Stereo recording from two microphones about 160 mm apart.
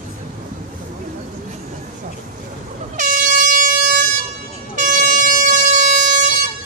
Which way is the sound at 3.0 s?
55° right (ahead or behind).